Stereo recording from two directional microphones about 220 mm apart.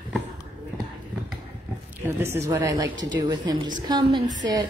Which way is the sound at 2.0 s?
10° right (ahead or behind).